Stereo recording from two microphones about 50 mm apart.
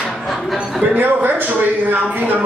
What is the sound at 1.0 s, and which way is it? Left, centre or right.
Speech, right.